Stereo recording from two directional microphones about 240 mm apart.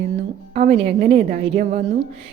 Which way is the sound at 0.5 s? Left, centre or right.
Right.